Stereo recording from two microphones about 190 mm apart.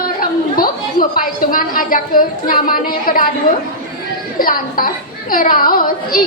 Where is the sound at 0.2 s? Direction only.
50° left (ahead or behind).